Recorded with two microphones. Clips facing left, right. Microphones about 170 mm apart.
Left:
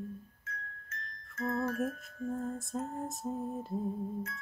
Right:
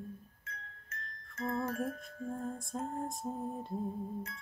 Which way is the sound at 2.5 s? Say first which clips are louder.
Left 1 dB; 5° left (ahead or behind).